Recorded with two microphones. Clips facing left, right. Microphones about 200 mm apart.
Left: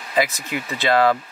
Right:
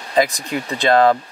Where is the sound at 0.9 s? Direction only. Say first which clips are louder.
Right 3 dB; 45° right (ahead or behind).